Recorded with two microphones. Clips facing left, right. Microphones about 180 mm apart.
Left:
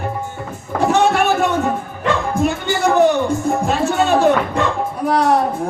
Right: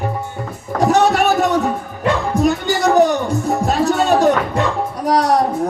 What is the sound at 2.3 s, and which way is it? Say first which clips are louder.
A woman's voice: right 2 dB; 40° right (ahead or behind).